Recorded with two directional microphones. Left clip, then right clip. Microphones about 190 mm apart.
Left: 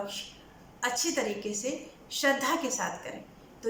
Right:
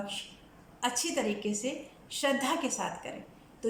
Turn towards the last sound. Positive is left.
turn(degrees=-15)  # may be behind; listen again after turning